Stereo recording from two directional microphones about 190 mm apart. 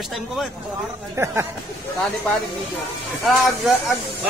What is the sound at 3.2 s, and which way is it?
Speech, centre (ahead or behind).